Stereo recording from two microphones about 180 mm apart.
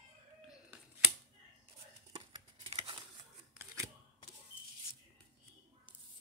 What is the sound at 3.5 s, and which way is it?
Scissors, 15° right (ahead or behind).